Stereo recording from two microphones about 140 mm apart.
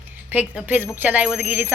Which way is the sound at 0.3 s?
10° right (ahead or behind).